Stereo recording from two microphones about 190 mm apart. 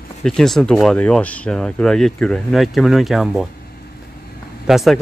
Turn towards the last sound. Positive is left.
turn(degrees=0)  # may be behind; listen again after turning